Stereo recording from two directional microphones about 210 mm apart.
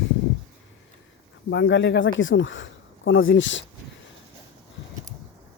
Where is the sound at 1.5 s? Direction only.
60° left (ahead or behind).